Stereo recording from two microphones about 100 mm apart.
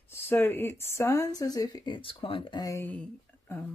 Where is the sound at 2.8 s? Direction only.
15° left (ahead or behind).